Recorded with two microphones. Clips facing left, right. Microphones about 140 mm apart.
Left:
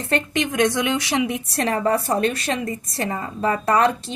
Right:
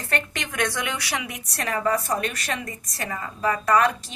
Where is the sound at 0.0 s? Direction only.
20° left (ahead or behind).